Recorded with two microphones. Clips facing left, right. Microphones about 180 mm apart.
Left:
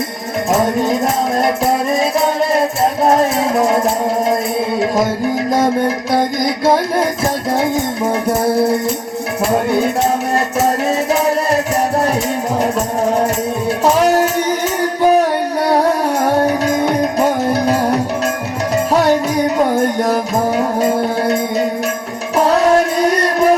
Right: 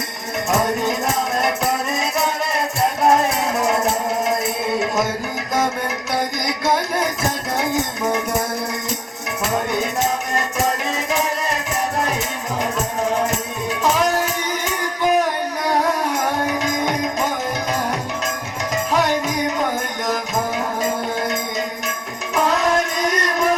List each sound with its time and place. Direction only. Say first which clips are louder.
6.1 s music: left 7 dB; 30° left (ahead or behind)
8.4 s music: left 12 dB; 30° left (ahead or behind)
10.8 s music: left 7 dB; 40° left (ahead or behind)
13.9 s music: left 8 dB; 40° left (ahead or behind)
15.6 s music: left 5 dB; 35° left (ahead or behind)
18.9 s music: left 6 dB; 40° left (ahead or behind)
22.4 s music: left 7 dB; 35° left (ahead or behind)